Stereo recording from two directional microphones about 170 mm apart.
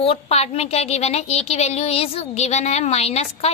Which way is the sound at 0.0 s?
35° left (ahead or behind).